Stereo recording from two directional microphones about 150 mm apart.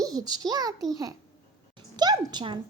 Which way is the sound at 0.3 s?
25° right (ahead or behind).